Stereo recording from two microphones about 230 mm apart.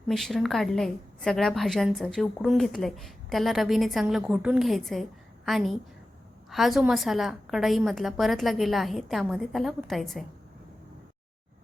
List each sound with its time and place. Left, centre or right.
0.1 s a woman's voice: centre